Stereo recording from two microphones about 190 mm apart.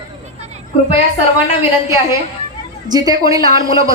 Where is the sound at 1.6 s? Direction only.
15° right (ahead or behind).